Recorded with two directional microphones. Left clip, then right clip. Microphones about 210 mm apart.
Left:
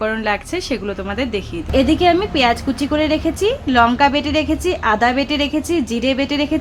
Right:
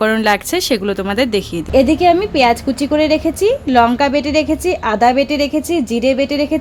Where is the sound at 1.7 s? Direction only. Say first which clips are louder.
Right 3 dB; 25° right (ahead or behind).